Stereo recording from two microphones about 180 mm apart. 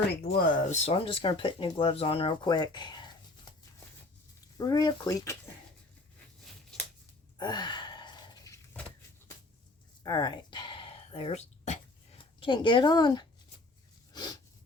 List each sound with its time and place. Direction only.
0.1 s speech: 60° left (ahead or behind); by 3.5 s 25° left (ahead or behind)
4.5 s a woman's voice: 20° left (ahead or behind)
7.3 s sigh: 25° left (ahead or behind)
10.0 s throat clearing: 25° left (ahead or behind); by 11.8 s 40° left (ahead or behind)
12.4 s a woman's voice: 25° left (ahead or behind)
14.1 s a sound: 20° left (ahead or behind)